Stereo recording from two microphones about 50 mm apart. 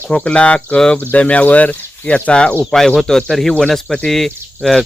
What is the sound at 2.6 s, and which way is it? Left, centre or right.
Speech, centre.